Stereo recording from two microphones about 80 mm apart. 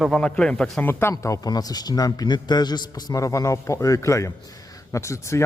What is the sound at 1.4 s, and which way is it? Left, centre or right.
A man's voice, left.